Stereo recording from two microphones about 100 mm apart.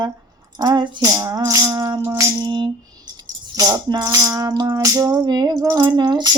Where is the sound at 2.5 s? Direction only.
50° right (ahead or behind).